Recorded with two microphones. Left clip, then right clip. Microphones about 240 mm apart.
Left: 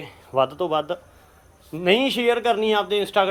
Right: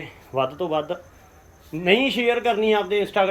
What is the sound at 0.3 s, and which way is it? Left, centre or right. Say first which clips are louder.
Speech: left 2 dB; centre.